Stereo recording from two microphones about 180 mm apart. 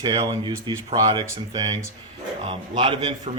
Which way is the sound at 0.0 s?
25° right (ahead or behind).